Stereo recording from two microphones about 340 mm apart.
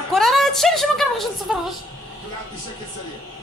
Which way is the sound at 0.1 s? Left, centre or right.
Centre.